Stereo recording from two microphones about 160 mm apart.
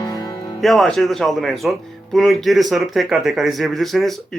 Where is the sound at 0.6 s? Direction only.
Centre (ahead or behind).